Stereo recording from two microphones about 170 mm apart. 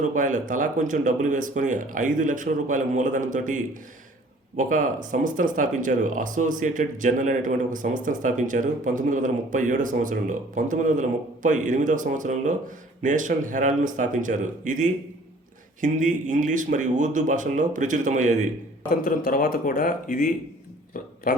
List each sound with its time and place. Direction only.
0.1 s speech: 50° right (ahead or behind)
18.9 s speech: 55° left (ahead or behind)